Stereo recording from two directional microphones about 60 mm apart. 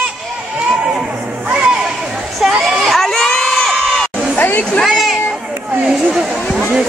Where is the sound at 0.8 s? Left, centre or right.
Centre.